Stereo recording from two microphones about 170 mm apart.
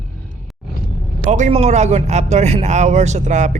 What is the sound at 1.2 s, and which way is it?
A man's voice, 45° right (ahead or behind).